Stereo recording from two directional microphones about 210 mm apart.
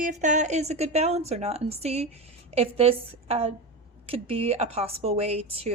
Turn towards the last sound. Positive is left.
turn(degrees=-30)  # may be behind; listen again after turning